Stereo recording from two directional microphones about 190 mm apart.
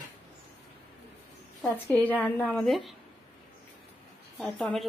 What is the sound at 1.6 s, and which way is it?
A woman's voice, 5° left (ahead or behind).